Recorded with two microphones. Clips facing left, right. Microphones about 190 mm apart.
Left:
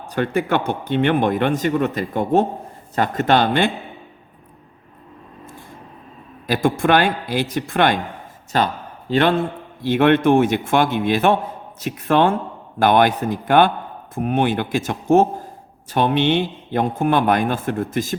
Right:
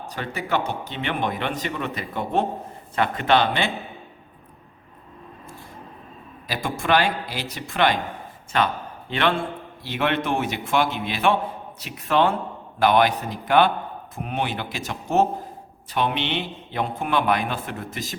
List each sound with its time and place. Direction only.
0.1 s a man's voice: 55° left (ahead or behind)
6.5 s a man's voice: 50° left (ahead or behind)
8.5 s a man's voice: 35° left (ahead or behind)